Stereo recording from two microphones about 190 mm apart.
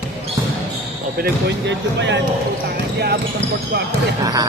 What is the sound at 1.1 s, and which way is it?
Speech, 60° right (ahead or behind).